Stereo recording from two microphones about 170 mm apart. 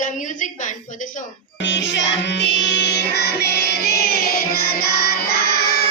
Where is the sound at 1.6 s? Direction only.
90° left.